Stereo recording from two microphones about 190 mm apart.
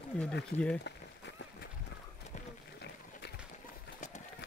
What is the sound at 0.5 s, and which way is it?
Speech, 35° left (ahead or behind).